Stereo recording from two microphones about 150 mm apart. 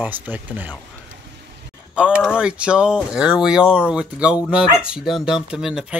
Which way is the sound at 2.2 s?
5° right (ahead or behind).